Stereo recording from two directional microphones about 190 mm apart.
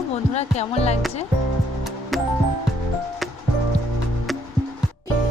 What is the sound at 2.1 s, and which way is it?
Music, centre (ahead or behind).